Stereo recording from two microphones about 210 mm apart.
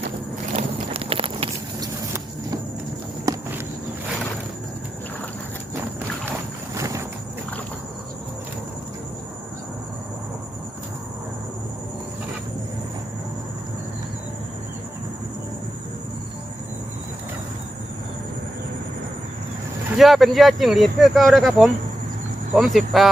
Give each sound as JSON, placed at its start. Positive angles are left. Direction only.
{"t": 0.5, "sound": "horse", "side_deg": -25}
{"t": 3.3, "sound": "walk", "side_deg": -15}
{"t": 6.7, "sound": "clip-clop", "side_deg": -15}
{"t": 20.0, "sound": "speech", "side_deg": 0}